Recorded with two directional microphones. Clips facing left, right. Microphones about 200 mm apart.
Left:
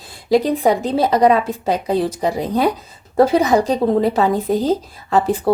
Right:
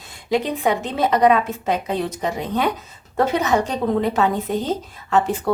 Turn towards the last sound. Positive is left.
turn(degrees=35)  # may be behind; listen again after turning